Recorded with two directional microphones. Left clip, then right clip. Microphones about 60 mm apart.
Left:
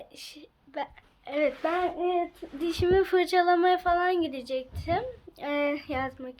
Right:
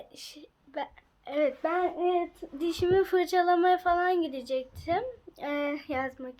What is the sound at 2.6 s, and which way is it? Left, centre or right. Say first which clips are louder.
Speech: left 1 dB; centre.